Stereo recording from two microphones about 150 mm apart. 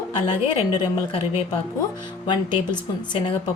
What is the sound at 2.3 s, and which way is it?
Speech, 30° left (ahead or behind).